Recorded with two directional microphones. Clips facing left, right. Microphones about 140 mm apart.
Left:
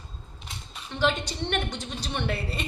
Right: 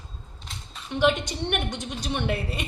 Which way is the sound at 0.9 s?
15° right (ahead or behind).